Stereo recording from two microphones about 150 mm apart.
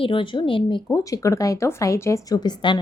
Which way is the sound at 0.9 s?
20° left (ahead or behind).